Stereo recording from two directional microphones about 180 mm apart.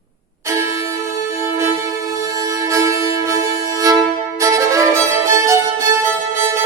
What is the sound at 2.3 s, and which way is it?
Music, 20° right (ahead or behind).